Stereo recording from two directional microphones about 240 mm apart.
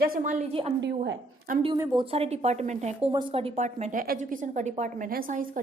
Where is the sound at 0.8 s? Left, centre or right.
Right.